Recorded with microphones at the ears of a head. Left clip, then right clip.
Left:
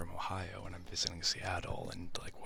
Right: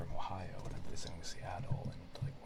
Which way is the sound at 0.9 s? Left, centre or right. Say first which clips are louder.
Left 17 dB; left.